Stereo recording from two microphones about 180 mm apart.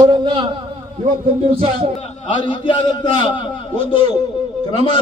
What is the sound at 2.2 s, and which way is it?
A man's voice, 25° left (ahead or behind).